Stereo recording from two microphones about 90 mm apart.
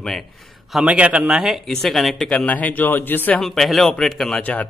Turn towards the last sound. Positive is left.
turn(degrees=5)  # may be behind; listen again after turning